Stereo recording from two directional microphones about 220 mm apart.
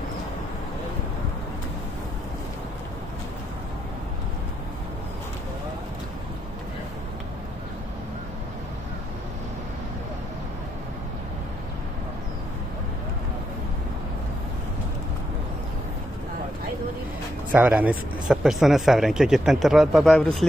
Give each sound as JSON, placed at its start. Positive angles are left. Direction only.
{"t": 17.5, "sound": "speech", "side_deg": -5}